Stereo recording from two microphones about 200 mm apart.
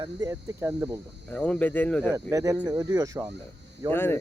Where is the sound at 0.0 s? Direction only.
15° right (ahead or behind).